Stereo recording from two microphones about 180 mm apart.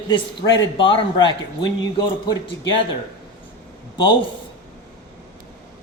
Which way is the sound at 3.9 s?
25° left (ahead or behind).